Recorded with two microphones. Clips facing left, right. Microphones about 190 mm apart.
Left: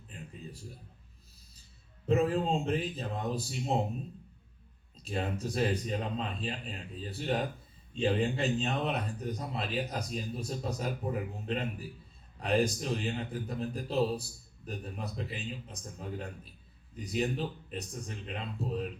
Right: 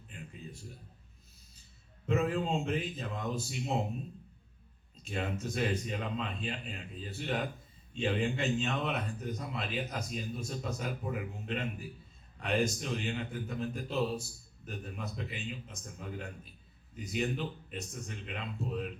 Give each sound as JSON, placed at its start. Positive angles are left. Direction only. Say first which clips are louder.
{"t": 0.1, "sound": "a sound", "louder": "left 1 dB", "side_deg": 35}
{"t": 2.0, "sound": "a man's voice", "louder": "left 3 dB", "side_deg": 35}
{"t": 5.0, "sound": "a man's voice", "louder": "left 2 dB", "side_deg": 35}